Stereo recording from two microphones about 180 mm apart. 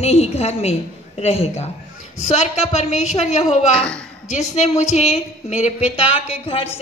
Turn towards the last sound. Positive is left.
turn(degrees=30)  # may be behind; listen again after turning